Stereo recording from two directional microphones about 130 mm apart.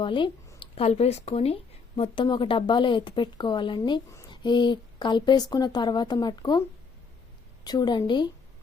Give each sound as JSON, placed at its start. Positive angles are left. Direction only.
{"t": 0.0, "sound": "a sound", "side_deg": 40}
{"t": 0.9, "sound": "speech", "side_deg": 55}
{"t": 2.0, "sound": "speech", "side_deg": 35}
{"t": 7.6, "sound": "speech", "side_deg": 30}